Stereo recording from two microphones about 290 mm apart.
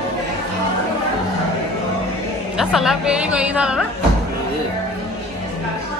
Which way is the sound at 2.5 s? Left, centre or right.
Centre.